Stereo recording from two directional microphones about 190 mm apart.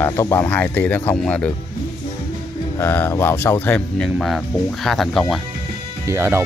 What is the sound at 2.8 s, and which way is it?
Speech, 10° left (ahead or behind).